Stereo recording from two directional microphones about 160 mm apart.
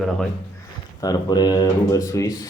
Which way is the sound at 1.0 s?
25° left (ahead or behind).